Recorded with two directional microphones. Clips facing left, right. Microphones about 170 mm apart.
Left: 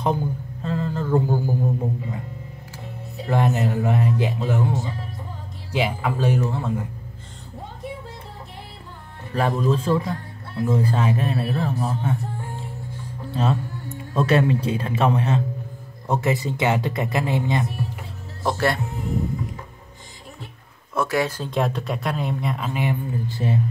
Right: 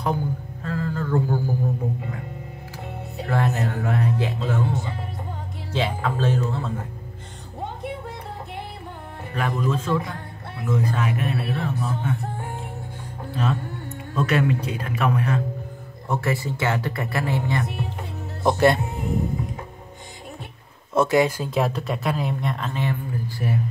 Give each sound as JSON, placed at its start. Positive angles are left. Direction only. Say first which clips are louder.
{"t": 0.0, "sound": "a sound", "louder": "left 2 dB", "side_deg": 20}
{"t": 3.3, "sound": "a man's voice", "louder": "left 3 dB", "side_deg": 20}
{"t": 9.3, "sound": "a man's voice", "louder": "left 4 dB", "side_deg": 30}
{"t": 12.2, "sound": "music", "louder": "right 1 dB", "side_deg": -65}
{"t": 13.3, "sound": "speech", "louder": "left 2 dB", "side_deg": 30}
{"t": 17.6, "sound": "music", "louder": "left 1 dB", "side_deg": -65}
{"t": 18.4, "sound": "speech", "louder": "right 4 dB", "side_deg": -20}
{"t": 20.9, "sound": "speech", "louder": "right 4 dB", "side_deg": -20}
{"t": 21.5, "sound": "speech", "louder": "even", "side_deg": 0}
{"t": 22.7, "sound": "speech", "louder": "left 2 dB", "side_deg": 15}